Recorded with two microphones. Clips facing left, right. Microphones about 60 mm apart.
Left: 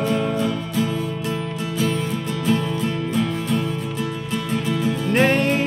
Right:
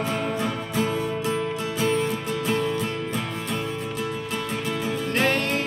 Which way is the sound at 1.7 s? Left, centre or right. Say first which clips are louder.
Left 1 dB; centre.